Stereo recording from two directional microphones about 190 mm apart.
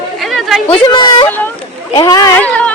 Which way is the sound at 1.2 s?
10° left (ahead or behind).